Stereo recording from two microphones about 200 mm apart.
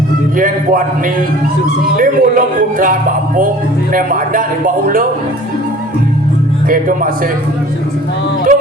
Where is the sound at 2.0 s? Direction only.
45° right (ahead or behind).